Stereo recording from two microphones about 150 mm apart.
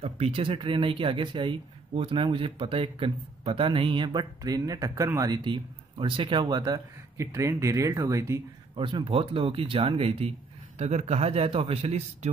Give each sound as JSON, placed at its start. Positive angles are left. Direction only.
{"t": 0.0, "sound": "speech", "side_deg": -40}
{"t": 8.7, "sound": "speech", "side_deg": -35}